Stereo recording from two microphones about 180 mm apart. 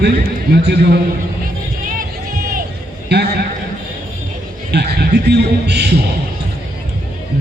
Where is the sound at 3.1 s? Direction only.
65° right (ahead or behind).